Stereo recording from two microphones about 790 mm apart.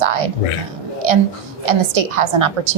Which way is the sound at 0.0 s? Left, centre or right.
Right.